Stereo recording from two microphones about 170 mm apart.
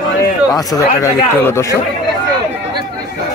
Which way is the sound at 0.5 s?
20° left (ahead or behind).